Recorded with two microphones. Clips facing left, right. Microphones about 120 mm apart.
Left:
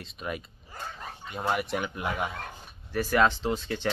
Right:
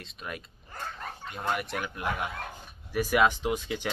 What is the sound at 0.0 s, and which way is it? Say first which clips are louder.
Speech: left 4 dB; centre (ahead or behind).